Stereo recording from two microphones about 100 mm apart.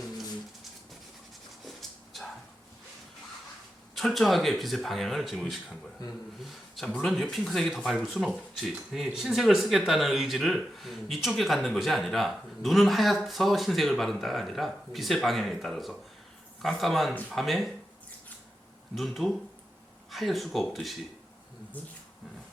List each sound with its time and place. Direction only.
3.9 s speech: centre (ahead or behind)
6.0 s speech: 40° left (ahead or behind)
6.4 s speech: centre (ahead or behind)
18.9 s speech: centre (ahead or behind)